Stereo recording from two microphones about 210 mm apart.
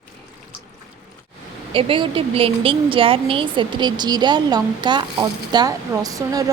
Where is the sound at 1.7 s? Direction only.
25° right (ahead or behind).